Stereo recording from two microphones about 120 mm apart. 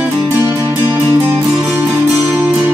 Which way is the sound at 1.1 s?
20° right (ahead or behind).